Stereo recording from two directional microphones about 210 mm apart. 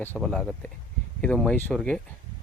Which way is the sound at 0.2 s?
Centre (ahead or behind).